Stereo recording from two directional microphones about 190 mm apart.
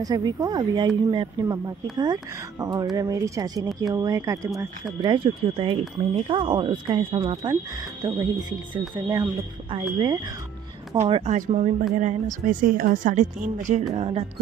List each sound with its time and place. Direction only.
0.0 s speech: 20° right (ahead or behind)
11.0 s a woman's voice: 35° right (ahead or behind)